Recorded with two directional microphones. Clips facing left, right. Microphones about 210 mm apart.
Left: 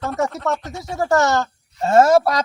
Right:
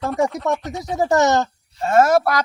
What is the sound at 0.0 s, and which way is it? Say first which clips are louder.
Speech: right 2 dB; centre (ahead or behind).